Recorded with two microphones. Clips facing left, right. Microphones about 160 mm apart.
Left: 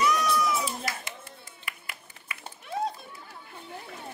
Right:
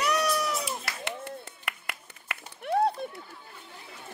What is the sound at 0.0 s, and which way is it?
Cat, 65° right (ahead or behind).